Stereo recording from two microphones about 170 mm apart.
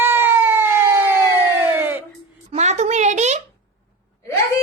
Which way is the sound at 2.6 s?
40° right (ahead or behind).